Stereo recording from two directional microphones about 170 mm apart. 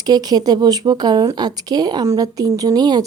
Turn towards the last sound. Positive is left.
turn(degrees=-25)  # may be behind; listen again after turning